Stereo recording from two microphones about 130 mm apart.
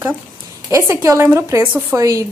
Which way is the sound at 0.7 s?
20° right (ahead or behind).